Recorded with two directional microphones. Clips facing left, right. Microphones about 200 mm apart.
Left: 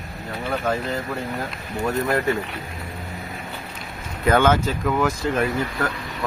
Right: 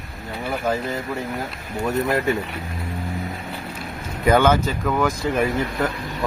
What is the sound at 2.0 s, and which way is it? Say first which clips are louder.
Speech: right 1 dB; 20° right (ahead or behind).